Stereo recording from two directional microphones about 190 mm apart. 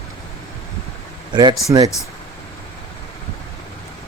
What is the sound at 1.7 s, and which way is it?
Speech, 15° right (ahead or behind).